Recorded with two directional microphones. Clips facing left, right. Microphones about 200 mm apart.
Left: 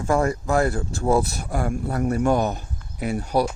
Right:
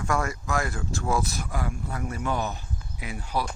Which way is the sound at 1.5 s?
50° left (ahead or behind).